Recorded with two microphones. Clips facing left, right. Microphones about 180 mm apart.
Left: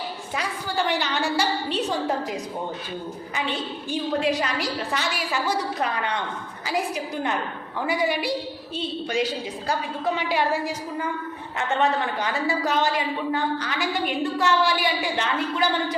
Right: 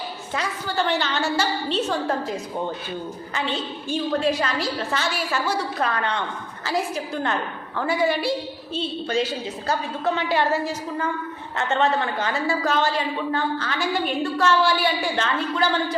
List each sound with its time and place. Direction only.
0.3 s a woman's voice: 15° left (ahead or behind)